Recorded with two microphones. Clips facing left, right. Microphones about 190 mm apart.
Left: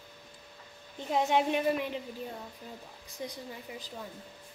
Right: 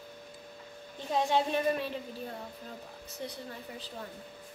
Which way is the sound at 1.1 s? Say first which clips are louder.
Left 1 dB; 15° left (ahead or behind).